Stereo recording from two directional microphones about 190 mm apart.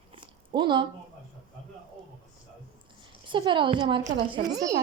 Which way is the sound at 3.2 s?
25° right (ahead or behind).